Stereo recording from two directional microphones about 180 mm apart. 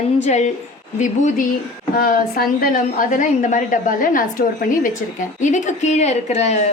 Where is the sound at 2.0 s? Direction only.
55° left (ahead or behind).